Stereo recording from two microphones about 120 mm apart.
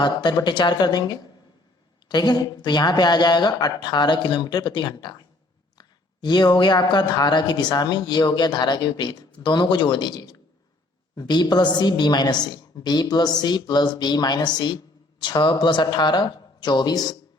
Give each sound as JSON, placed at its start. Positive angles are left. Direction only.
{"t": 0.0, "sound": "a woman's voice", "side_deg": 40}
{"t": 6.2, "sound": "a woman's voice", "side_deg": 35}